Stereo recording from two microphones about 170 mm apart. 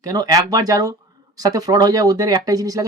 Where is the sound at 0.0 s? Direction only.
20° right (ahead or behind).